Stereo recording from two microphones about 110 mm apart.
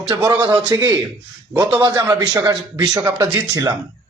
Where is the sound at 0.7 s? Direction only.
30° right (ahead or behind).